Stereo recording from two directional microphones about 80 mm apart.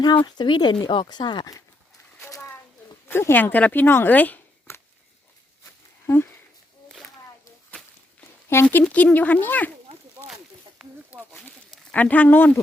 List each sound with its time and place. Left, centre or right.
0.0 s speech: left
3.1 s speech: left
8.5 s speech: left
8.9 s speech: centre
10.8 s snake: centre
11.7 s speech: centre